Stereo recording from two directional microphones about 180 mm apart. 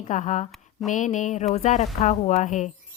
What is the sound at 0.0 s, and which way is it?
Speech, 45° left (ahead or behind).